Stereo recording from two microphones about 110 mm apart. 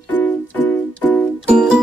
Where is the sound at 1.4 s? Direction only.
10° right (ahead or behind).